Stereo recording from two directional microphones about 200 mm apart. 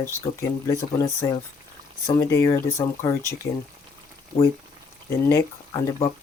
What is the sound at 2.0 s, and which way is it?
Speech, 15° left (ahead or behind).